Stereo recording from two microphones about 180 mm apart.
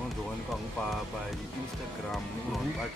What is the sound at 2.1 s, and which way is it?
Speech, centre (ahead or behind).